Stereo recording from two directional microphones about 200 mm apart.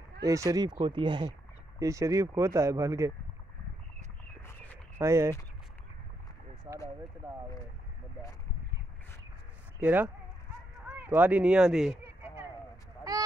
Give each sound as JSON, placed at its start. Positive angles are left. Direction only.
{"t": 0.2, "sound": "speech", "side_deg": -15}
{"t": 4.9, "sound": "speech", "side_deg": -15}
{"t": 9.8, "sound": "speech", "side_deg": -10}
{"t": 10.9, "sound": "a sound", "side_deg": -10}